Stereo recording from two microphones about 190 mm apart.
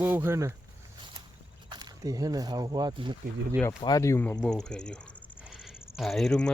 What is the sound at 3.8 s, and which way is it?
Speech, 20° left (ahead or behind).